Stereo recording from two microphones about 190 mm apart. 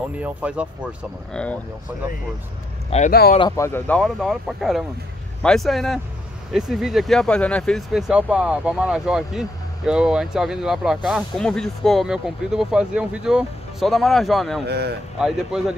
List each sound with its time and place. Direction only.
0.2 s speech: 5° right (ahead or behind)
1.3 s speech: 5° left (ahead or behind)
3.1 s speech: 55° left (ahead or behind)
3.3 s speech: 20° left (ahead or behind); by 14.6 s centre (ahead or behind)
14.7 s speech: 60° right (ahead or behind)
15.1 s speech: 5° right (ahead or behind)